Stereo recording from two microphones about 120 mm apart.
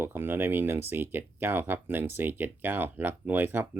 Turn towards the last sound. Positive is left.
turn(degrees=-15)  # may be behind; listen again after turning